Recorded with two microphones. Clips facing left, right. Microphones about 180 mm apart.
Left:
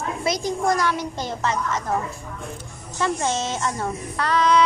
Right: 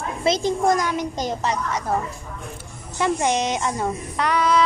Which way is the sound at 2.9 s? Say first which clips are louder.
Right 3 dB; 15° right (ahead or behind).